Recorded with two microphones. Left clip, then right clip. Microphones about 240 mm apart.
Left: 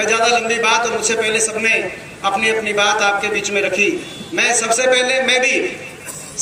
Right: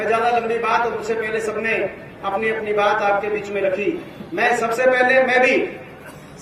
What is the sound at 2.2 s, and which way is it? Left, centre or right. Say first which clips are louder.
Speech: left 5 dB; centre.